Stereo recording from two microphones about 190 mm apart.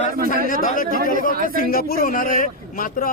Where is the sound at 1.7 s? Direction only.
50° left (ahead or behind).